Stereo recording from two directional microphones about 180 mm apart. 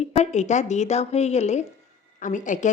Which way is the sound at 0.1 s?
40° left (ahead or behind).